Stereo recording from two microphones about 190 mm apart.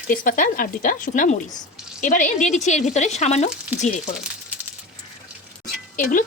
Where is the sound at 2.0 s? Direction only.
40° left (ahead or behind).